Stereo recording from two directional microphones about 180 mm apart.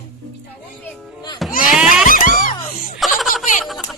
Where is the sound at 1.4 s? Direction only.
Centre (ahead or behind).